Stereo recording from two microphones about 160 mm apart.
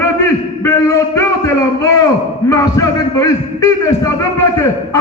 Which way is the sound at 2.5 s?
20° left (ahead or behind).